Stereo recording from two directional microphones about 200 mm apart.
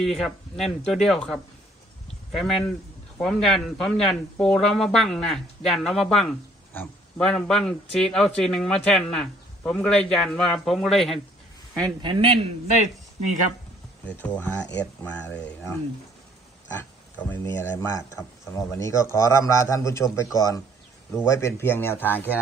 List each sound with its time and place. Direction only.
0.0 s speech: centre (ahead or behind)
11.8 s speech: 25° right (ahead or behind)
14.0 s a man's voice: 5° left (ahead or behind)
17.2 s a man's voice: 10° left (ahead or behind)